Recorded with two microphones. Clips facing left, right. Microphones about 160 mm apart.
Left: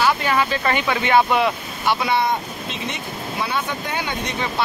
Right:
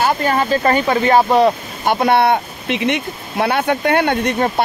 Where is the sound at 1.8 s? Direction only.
50° right (ahead or behind).